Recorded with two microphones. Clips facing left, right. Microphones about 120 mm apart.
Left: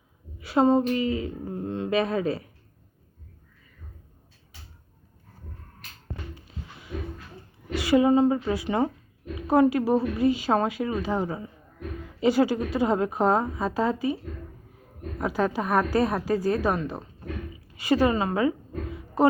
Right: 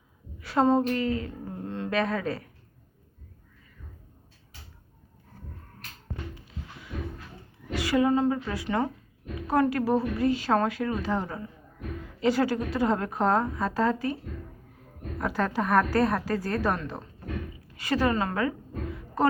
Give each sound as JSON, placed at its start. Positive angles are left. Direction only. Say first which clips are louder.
{"t": 0.3, "sound": "speech", "louder": "left 2 dB", "side_deg": 15}
{"t": 7.8, "sound": "a woman's voice", "louder": "left 4 dB", "side_deg": 20}
{"t": 15.2, "sound": "a woman's voice", "louder": "left 2 dB", "side_deg": 10}